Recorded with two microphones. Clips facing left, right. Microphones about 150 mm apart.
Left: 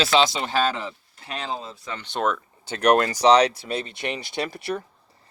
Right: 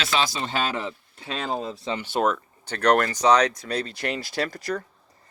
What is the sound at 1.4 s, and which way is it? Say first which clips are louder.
Speech: right 3 dB; 50° right (ahead or behind).